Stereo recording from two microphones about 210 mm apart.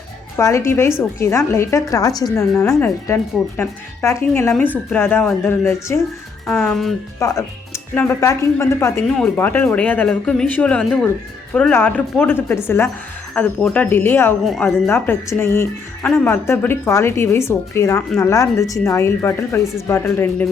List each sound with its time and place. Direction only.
0.3 s a woman's voice: 15° left (ahead or behind)
7.2 s a woman's voice: 15° left (ahead or behind)
14.8 s a woman's voice: 10° left (ahead or behind)